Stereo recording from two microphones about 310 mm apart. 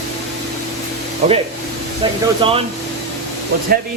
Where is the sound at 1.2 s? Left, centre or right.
Right.